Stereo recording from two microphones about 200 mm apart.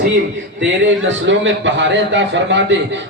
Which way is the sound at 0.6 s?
65° right (ahead or behind).